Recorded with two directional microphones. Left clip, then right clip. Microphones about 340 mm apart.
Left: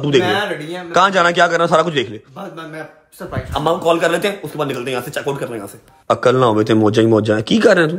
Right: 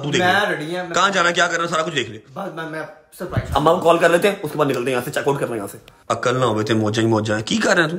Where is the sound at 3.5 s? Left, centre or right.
Centre.